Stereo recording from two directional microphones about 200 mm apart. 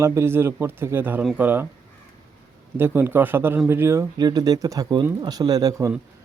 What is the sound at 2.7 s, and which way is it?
Speech, 10° right (ahead or behind).